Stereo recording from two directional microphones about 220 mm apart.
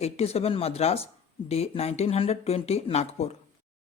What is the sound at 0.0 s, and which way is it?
Speech, 30° left (ahead or behind).